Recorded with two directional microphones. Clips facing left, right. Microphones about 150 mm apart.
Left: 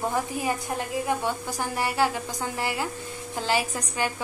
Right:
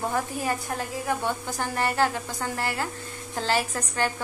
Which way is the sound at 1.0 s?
10° left (ahead or behind).